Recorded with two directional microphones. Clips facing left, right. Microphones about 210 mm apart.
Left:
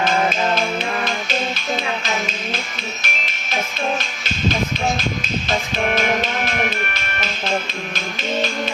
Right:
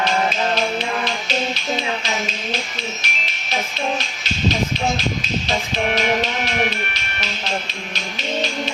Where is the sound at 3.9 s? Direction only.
50° left (ahead or behind).